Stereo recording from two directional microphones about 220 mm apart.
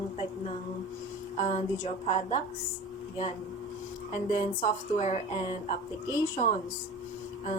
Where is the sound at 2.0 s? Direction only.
30° left (ahead or behind).